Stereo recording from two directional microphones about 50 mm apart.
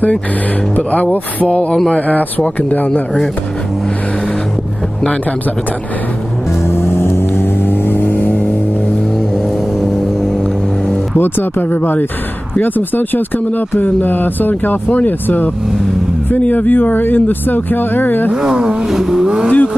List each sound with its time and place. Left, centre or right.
0.7 s speech: left
6.6 s vehicle: left
9.8 s vehicle: centre
11.1 s speech: left
18.3 s speech: centre
19.5 s speech: left